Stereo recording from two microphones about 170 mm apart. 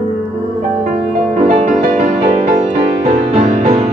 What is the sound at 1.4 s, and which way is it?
Music, 45° right (ahead or behind).